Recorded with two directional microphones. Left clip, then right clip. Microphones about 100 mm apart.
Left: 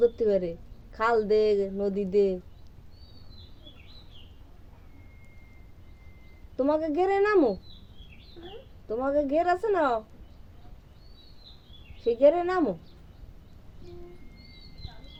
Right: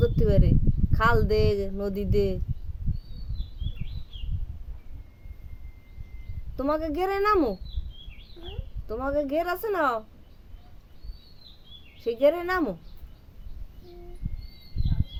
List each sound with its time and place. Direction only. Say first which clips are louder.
0.0 s speech: left 2 dB; 30° right (ahead or behind)
6.6 s speech: left 2 dB; 30° right (ahead or behind)
8.4 s a sound: right 1 dB; 5° right (ahead or behind)
8.9 s speech: left 1 dB; 30° right (ahead or behind)
11.9 s speech: left 2 dB; 30° right (ahead or behind)